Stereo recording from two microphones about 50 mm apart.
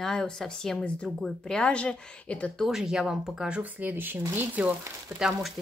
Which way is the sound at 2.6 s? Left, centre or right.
Centre.